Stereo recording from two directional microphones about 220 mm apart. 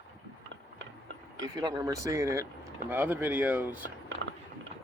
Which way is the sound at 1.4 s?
15° right (ahead or behind).